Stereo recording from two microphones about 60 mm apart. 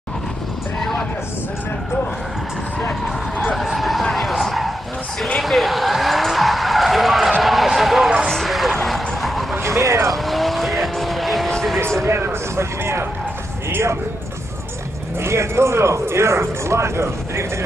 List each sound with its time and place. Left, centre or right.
3.6 s vehicle: centre
7.4 s a sound: centre
8.3 s vehicle: centre
9.6 s vehicle: right
10.1 s vehicle: centre
12.0 s a sound: right
13.7 s speech: right
15.1 s speech: right